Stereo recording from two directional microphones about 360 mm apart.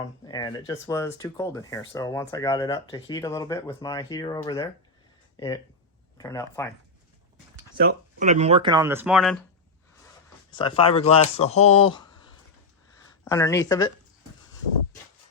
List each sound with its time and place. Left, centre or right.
0.3 s speech: centre
6.1 s speech: centre
7.8 s speech: right; by 9.4 s centre
10.5 s speech: centre
13.2 s speech: centre